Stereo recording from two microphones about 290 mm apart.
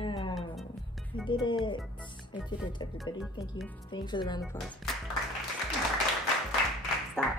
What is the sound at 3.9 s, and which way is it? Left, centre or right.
Speech, centre.